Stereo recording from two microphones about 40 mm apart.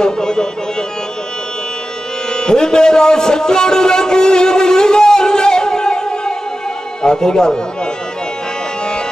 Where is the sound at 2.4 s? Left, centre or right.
Centre.